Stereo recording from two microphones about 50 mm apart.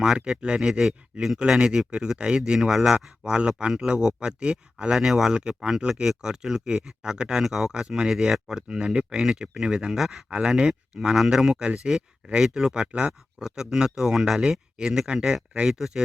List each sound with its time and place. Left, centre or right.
0.3 s speech: centre
3.2 s speech: centre
10.2 s speech: right
10.5 s speech: centre